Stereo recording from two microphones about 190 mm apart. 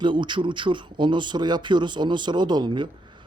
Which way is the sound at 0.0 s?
25° right (ahead or behind).